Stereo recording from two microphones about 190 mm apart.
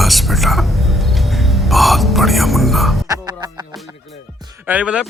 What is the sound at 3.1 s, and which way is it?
Music, 20° right (ahead or behind).